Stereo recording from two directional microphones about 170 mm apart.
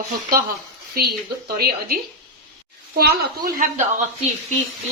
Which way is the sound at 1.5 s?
65° right (ahead or behind).